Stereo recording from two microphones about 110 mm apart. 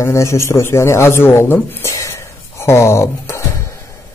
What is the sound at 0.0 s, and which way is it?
A man's voice, 25° left (ahead or behind).